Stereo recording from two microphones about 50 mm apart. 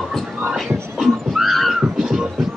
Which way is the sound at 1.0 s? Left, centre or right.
Centre.